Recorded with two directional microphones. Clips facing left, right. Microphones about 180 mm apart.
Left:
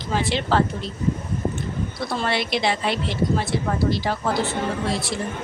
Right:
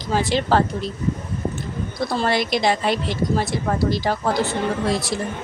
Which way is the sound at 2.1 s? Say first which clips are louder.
Right 3 dB; 40° right (ahead or behind).